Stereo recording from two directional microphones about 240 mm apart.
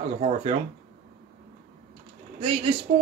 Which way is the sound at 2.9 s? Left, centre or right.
Right.